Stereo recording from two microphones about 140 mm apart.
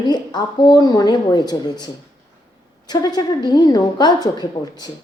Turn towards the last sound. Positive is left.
turn(degrees=30)  # may be behind; listen again after turning